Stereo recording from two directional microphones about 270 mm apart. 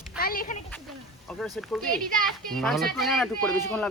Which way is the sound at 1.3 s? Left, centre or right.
Centre.